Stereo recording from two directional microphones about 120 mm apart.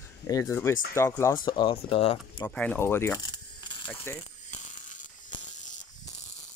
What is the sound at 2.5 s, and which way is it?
Speech, 10° left (ahead or behind).